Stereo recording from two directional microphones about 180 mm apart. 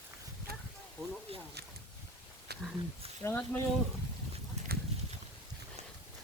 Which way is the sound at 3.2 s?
10° left (ahead or behind).